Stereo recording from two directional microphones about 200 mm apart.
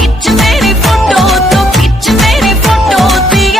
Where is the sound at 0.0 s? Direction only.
Centre (ahead or behind).